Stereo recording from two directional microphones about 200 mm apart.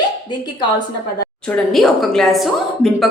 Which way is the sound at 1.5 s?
Centre (ahead or behind).